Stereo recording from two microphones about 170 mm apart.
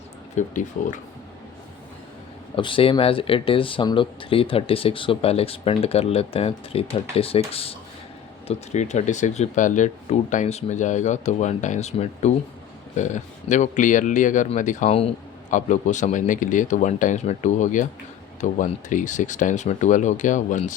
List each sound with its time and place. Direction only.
0.3 s speech: 50° left (ahead or behind)
2.6 s speech: 30° left (ahead or behind); by 20.7 s 45° left (ahead or behind)